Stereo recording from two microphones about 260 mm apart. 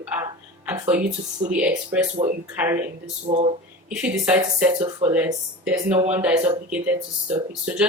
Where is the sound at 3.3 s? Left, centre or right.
Right.